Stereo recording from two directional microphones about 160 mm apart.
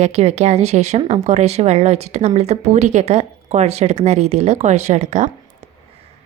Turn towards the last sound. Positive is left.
turn(degrees=-45)  # may be behind; listen again after turning